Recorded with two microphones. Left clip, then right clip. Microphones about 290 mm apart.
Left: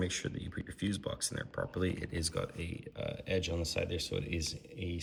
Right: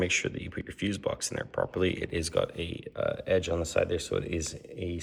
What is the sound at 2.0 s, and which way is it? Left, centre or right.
Speech, right.